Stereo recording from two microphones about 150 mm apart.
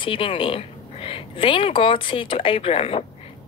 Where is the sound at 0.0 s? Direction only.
35° left (ahead or behind).